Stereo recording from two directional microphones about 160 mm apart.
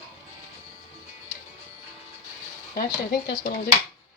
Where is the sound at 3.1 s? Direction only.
75° left (ahead or behind).